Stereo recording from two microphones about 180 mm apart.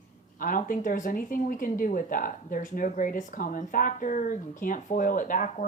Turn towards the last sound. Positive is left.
turn(degrees=50)  # may be behind; listen again after turning